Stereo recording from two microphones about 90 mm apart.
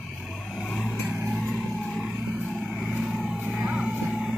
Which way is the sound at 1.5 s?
5° left (ahead or behind).